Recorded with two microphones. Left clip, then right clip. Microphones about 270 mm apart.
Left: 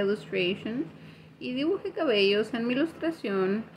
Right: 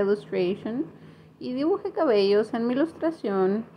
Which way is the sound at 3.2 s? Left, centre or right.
Centre.